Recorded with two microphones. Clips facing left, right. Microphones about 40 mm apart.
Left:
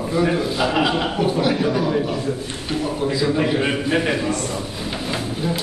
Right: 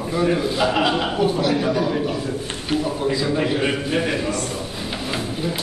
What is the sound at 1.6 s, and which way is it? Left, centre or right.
A man's voice, centre.